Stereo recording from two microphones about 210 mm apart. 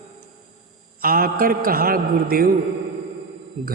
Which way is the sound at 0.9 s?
45° right (ahead or behind).